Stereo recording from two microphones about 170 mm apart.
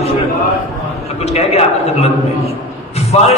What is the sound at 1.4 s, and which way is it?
Speech, 40° left (ahead or behind).